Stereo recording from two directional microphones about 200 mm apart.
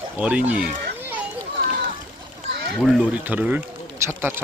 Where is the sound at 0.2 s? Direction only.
5° right (ahead or behind).